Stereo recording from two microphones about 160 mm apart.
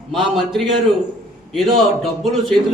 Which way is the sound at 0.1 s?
Centre (ahead or behind).